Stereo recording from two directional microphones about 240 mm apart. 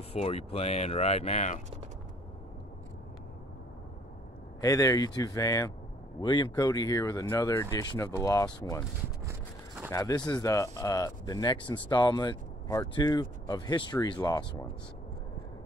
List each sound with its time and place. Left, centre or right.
0.1 s speech: left
4.6 s speech: centre
9.8 s speech: centre